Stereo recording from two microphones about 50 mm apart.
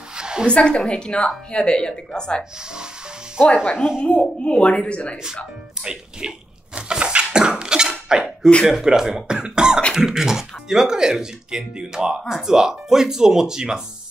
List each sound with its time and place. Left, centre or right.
0.1 s a sound: centre
0.5 s speech: left
3.7 s speech: centre
4.0 s speech: left
5.1 s speech: centre
5.8 s a sound: centre
8.6 s speech: centre